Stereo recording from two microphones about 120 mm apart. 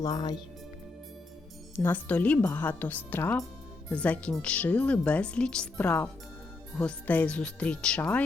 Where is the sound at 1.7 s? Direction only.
15° left (ahead or behind).